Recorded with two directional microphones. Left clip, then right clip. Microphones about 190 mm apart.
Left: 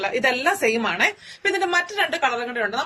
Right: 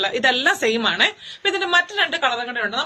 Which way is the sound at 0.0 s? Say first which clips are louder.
Right 2 dB; 10° right (ahead or behind).